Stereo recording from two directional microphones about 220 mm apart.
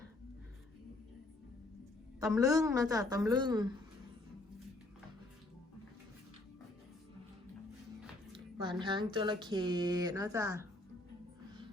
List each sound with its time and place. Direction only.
2.2 s a woman's voice: 15° right (ahead or behind)
8.8 s speech: 20° right (ahead or behind)